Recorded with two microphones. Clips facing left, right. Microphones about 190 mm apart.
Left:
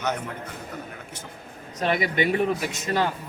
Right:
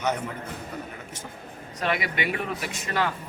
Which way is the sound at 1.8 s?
40° left (ahead or behind).